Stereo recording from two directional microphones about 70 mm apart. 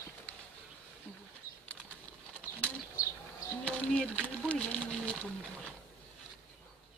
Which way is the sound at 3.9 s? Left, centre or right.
Centre.